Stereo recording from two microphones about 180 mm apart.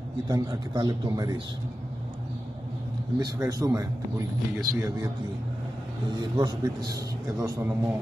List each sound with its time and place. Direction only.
0.3 s a man's voice: 20° right (ahead or behind)
3.2 s a man's voice: 20° right (ahead or behind)
6.3 s a man's voice: 25° right (ahead or behind)